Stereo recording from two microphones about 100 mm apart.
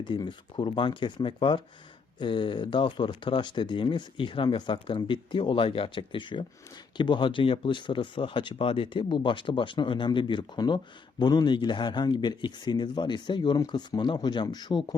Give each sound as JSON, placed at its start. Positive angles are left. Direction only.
{"t": 0.0, "sound": "speech", "side_deg": 50}